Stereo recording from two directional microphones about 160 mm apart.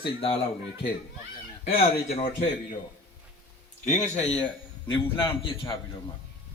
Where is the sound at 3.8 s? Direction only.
45° left (ahead or behind).